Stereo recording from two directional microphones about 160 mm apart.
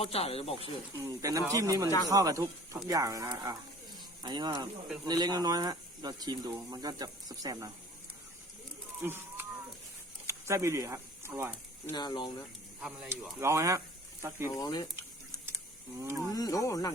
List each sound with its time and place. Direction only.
0.0 s speech: 40° left (ahead or behind)
0.9 s speech: 20° right (ahead or behind)
9.0 s a sound: 15° right (ahead or behind)
10.2 s speech: 20° right (ahead or behind)
11.9 s speech: 25° left (ahead or behind)
13.4 s speech: 20° right (ahead or behind)
14.5 s speech: 25° left (ahead or behind)
16.0 s speech: 20° right (ahead or behind)
16.3 s speech: 20° left (ahead or behind)